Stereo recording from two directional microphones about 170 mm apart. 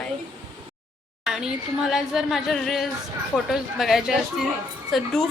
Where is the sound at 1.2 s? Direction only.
5° right (ahead or behind).